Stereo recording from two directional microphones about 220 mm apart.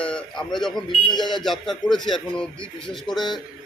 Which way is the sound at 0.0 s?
5° left (ahead or behind).